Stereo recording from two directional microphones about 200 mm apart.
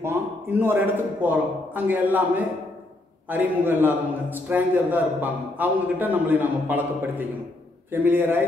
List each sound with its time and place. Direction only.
0.0 s a man's voice: 10° right (ahead or behind)